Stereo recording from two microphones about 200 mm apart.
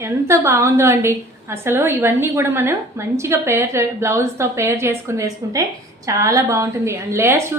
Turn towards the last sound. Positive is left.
turn(degrees=-15)  # may be behind; listen again after turning